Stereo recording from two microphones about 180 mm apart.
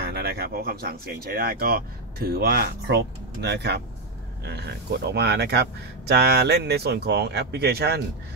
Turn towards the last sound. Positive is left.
turn(degrees=-65)  # may be behind; listen again after turning